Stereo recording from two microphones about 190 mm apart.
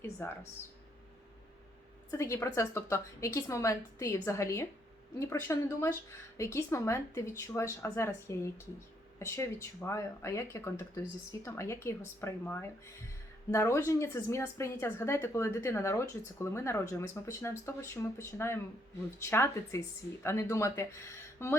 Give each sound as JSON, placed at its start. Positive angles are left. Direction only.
{"t": 0.2, "sound": "speech", "side_deg": 10}
{"t": 2.0, "sound": "speech", "side_deg": 15}